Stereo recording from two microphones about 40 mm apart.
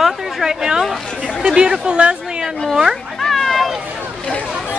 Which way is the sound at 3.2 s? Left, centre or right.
Centre.